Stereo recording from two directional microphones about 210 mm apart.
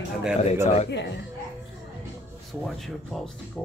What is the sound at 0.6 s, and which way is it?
Speech, 30° left (ahead or behind).